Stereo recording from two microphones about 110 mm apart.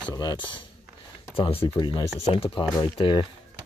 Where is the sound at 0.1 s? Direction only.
35° left (ahead or behind).